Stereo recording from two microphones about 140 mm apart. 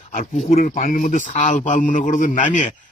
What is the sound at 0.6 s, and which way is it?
A man's voice, 85° left.